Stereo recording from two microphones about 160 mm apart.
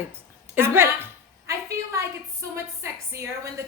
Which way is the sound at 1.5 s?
20° right (ahead or behind).